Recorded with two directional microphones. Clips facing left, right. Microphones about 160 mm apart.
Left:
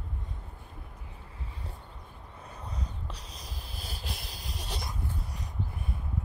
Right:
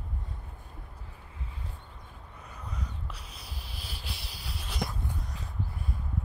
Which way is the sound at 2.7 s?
35° left (ahead or behind).